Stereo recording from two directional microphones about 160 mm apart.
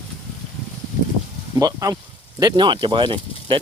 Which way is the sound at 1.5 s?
20° right (ahead or behind).